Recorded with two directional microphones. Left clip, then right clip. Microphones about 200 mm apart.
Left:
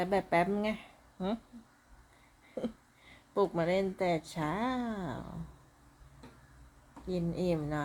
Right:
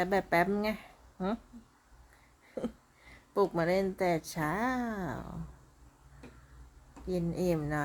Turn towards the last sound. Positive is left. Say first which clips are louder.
# right 2 dB
turn(degrees=-10)  # may be behind; listen again after turning